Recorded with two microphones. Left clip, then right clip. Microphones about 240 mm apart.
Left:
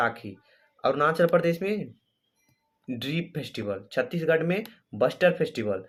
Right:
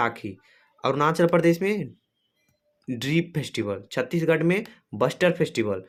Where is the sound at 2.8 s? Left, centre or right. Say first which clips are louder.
Right 6 dB; right.